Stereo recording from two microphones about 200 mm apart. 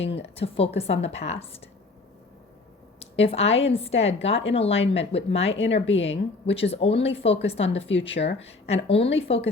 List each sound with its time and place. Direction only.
0.0 s a woman's voice: 30° left (ahead or behind)
3.0 s a woman's voice: 30° left (ahead or behind)
5.5 s a woman's voice: 65° left (ahead or behind)
6.1 s a woman's voice: 30° left (ahead or behind)